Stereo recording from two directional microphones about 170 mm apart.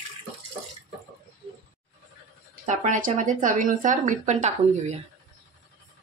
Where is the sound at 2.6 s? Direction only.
45° right (ahead or behind).